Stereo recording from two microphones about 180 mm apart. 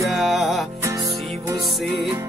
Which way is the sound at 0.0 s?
Centre (ahead or behind).